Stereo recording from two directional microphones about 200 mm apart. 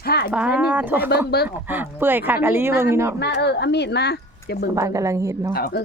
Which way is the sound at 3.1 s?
55° left (ahead or behind).